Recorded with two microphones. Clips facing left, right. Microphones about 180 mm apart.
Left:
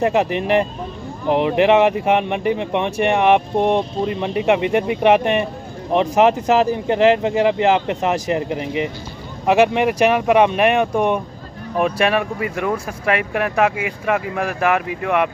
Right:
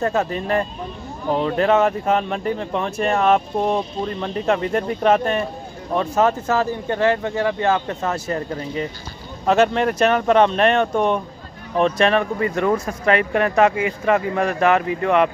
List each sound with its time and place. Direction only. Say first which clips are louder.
0.0 s speech: left 4 dB; 15° left (ahead or behind)